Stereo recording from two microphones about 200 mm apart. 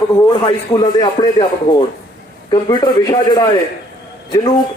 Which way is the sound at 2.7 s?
20° left (ahead or behind).